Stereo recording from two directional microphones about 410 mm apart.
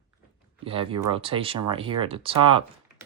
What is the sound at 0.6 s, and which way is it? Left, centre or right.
Speech, centre.